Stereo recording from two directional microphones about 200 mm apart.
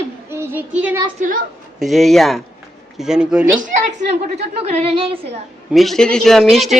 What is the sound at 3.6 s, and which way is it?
A woman's voice, 35° right (ahead or behind).